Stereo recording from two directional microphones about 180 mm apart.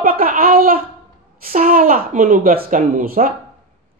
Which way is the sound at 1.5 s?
50° right (ahead or behind).